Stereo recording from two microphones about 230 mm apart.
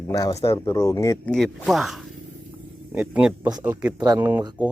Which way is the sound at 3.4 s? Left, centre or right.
Centre.